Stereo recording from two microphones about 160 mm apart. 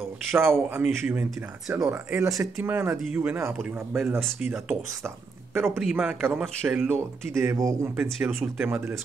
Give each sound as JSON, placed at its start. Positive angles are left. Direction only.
{"t": 0.3, "sound": "speech", "side_deg": -15}
{"t": 7.0, "sound": "speech", "side_deg": -20}